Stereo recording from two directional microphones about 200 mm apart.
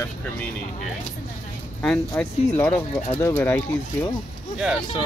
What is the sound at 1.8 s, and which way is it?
Speech, 5° left (ahead or behind).